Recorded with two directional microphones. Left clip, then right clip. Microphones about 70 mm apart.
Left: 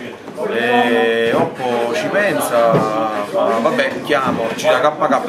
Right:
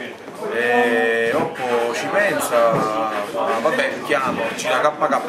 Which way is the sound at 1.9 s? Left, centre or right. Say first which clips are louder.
Left 3 dB; centre.